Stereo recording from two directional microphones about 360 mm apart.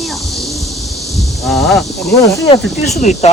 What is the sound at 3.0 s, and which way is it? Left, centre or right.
Speech, centre.